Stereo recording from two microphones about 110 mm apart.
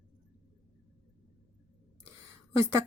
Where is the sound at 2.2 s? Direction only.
25° right (ahead or behind).